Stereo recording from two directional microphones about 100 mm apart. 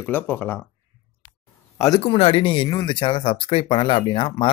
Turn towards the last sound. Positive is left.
turn(degrees=55)  # may be behind; listen again after turning